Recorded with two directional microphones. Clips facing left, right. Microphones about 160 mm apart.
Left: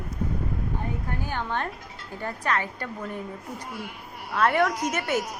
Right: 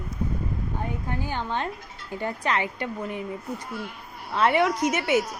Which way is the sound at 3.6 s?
10° left (ahead or behind).